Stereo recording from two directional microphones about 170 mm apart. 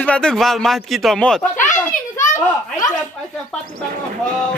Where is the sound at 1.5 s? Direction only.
50° left (ahead or behind).